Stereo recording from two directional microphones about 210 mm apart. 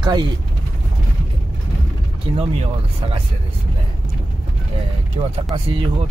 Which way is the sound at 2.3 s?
25° right (ahead or behind).